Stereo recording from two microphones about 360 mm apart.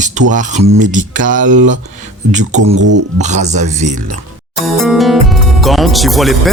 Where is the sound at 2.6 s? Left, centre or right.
Right.